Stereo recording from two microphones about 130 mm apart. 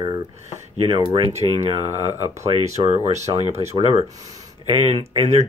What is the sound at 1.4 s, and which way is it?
Speech, 35° right (ahead or behind).